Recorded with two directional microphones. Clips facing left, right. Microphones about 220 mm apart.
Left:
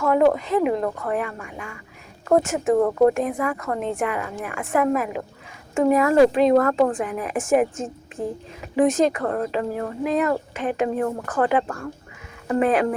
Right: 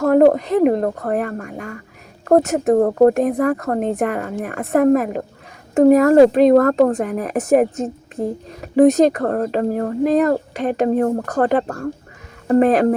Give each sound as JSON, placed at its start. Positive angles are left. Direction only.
{"t": 0.0, "sound": "speech", "side_deg": -45}